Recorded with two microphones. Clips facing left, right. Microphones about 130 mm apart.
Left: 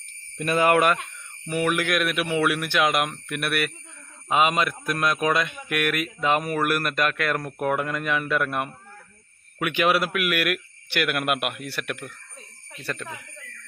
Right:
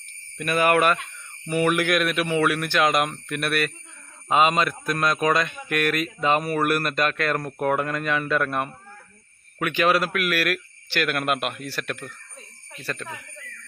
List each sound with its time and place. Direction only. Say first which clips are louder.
0.3 s speech: even; 25° left (ahead or behind)
1.5 s speech: right 2 dB; centre (ahead or behind)